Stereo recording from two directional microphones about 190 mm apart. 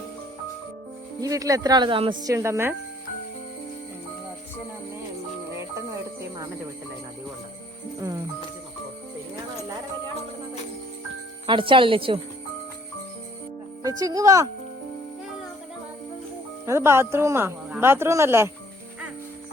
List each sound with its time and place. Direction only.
1.2 s speech: 20° right (ahead or behind)
11.4 s a woman's voice: 25° right (ahead or behind)
13.8 s a woman's voice: 20° right (ahead or behind)
16.6 s speech: 15° right (ahead or behind)